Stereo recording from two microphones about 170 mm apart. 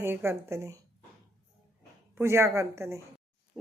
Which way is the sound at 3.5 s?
5° right (ahead or behind).